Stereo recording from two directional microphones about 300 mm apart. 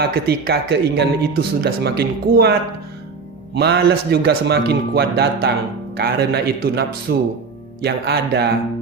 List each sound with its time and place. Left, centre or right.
0.0 s speech: right